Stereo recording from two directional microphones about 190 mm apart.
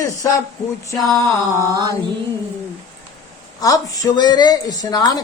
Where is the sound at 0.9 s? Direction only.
Centre (ahead or behind).